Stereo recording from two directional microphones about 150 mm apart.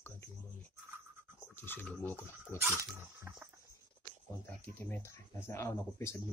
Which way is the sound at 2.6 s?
15° right (ahead or behind).